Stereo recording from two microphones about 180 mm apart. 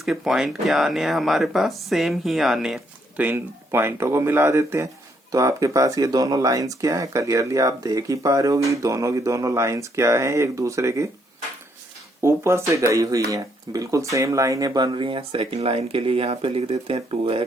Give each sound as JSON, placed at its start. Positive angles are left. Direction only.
{"t": 0.0, "sound": "speech", "side_deg": 0}
{"t": 12.2, "sound": "speech", "side_deg": -15}